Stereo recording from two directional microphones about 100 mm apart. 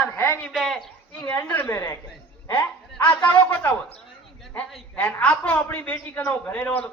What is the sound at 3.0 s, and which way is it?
Speech, 20° left (ahead or behind).